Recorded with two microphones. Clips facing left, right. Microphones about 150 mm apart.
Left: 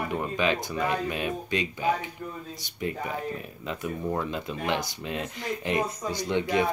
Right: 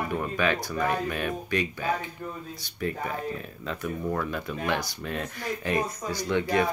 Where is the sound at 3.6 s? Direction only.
20° left (ahead or behind).